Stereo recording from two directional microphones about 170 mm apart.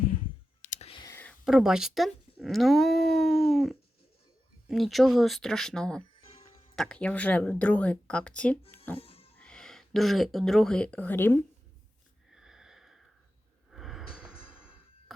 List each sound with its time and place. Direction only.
0.6 s clicking: 45° left (ahead or behind)
1.0 s a sound: 10° left (ahead or behind)
1.5 s speech: centre (ahead or behind)
6.2 s music: 35° left (ahead or behind)
6.7 s speech: 5° left (ahead or behind)
9.0 s music: 35° left (ahead or behind)
9.4 s speech: 5° left (ahead or behind)
12.3 s wheeze: 5° right (ahead or behind)
13.7 s a sound: centre (ahead or behind)